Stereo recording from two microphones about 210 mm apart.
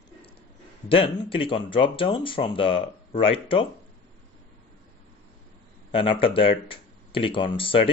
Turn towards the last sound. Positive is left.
turn(degrees=25)  # may be behind; listen again after turning